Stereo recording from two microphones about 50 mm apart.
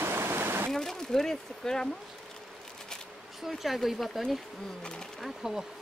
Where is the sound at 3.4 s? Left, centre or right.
Centre.